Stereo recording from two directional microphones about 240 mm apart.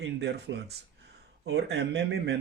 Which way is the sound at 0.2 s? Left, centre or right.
Right.